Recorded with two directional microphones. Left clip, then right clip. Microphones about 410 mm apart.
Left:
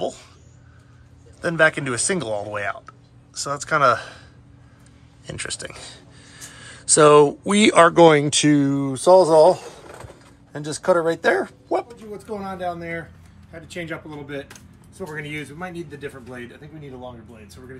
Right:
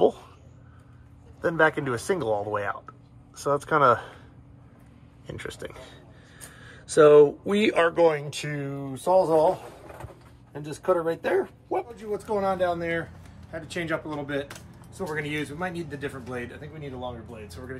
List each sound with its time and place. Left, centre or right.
1.4 s speech: centre
5.2 s speech: centre
7.9 s speech: left
8.4 s speech: centre
10.7 s speech: centre
12.1 s speech: centre